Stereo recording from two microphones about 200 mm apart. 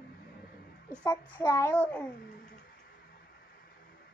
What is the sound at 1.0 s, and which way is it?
A child's voice, 15° left (ahead or behind).